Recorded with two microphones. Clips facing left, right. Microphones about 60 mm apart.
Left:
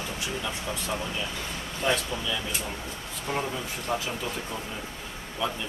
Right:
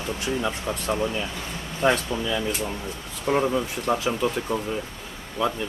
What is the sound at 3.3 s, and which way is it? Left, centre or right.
Speech, right.